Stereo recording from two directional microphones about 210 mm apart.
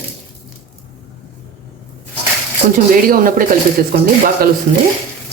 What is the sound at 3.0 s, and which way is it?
Speech, 40° right (ahead or behind).